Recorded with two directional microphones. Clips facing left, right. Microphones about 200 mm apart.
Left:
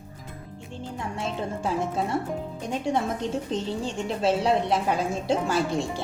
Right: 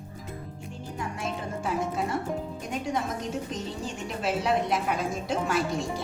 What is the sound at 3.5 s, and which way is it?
A woman's voice, 30° left (ahead or behind).